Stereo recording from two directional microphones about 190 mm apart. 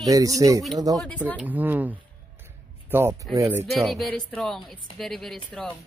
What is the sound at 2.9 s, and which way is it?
Speech, 15° right (ahead or behind).